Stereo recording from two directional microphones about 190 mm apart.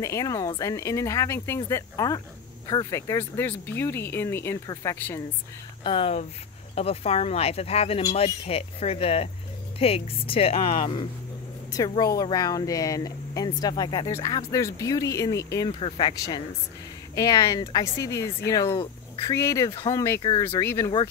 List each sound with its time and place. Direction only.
0.0 s speech: 15° left (ahead or behind)
5.9 s speech: 30° left (ahead or behind)